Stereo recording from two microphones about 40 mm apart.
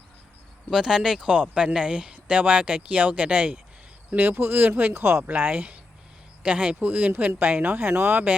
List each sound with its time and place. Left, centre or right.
0.7 s speech: centre
1.3 s speech: right
2.2 s speech: right
4.2 s speech: right
4.9 s speech: right
5.4 s speech: right
6.4 s speech: right
7.8 s speech: right